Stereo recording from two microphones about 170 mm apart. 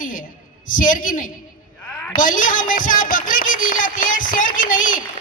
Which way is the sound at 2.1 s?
50° left (ahead or behind).